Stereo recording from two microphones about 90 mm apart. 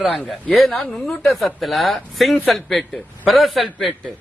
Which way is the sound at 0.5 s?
Centre (ahead or behind).